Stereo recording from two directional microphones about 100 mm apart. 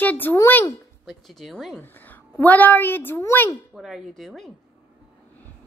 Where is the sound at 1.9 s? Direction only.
20° left (ahead or behind).